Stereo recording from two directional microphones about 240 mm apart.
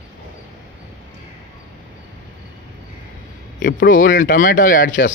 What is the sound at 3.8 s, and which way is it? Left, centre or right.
Speech, left.